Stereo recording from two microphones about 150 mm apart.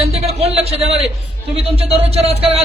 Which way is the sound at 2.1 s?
40° right (ahead or behind).